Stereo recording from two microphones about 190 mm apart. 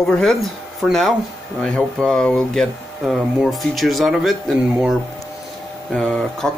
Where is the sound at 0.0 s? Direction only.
Centre (ahead or behind).